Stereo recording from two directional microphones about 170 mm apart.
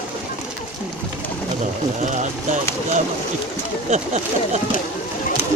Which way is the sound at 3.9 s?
40° right (ahead or behind).